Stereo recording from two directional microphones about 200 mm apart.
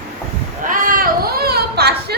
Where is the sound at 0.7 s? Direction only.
45° right (ahead or behind).